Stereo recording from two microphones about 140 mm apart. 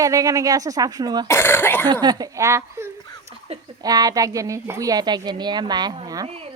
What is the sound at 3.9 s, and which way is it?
A woman's voice, 25° right (ahead or behind).